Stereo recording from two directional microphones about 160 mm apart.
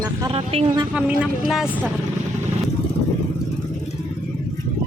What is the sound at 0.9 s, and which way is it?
Speech, 5° right (ahead or behind).